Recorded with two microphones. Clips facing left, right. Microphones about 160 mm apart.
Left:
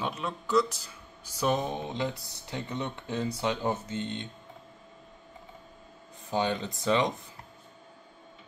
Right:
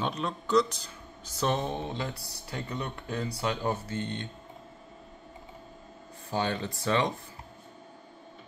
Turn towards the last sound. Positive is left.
turn(degrees=15)  # may be behind; listen again after turning